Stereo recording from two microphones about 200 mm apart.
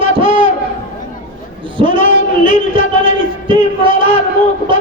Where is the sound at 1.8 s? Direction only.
25° right (ahead or behind).